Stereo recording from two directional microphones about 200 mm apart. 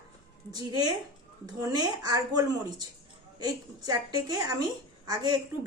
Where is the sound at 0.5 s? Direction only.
20° right (ahead or behind).